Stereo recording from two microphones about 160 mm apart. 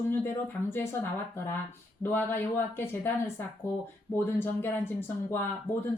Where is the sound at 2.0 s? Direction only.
10° left (ahead or behind).